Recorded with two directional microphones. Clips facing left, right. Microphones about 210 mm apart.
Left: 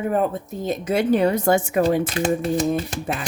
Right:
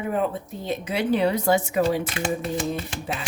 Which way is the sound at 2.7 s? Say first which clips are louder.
Left 5 dB; 55° left (ahead or behind).